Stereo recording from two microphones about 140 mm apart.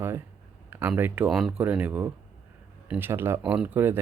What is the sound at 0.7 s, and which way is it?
Speech, 15° right (ahead or behind).